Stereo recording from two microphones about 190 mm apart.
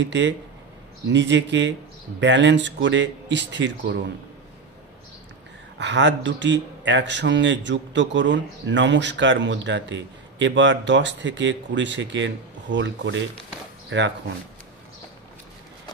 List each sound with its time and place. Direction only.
0.0 s a man's voice: 70° right (ahead or behind)
5.8 s a man's voice: 70° right (ahead or behind)